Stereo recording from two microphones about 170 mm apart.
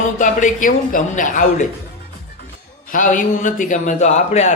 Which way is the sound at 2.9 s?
50° left (ahead or behind).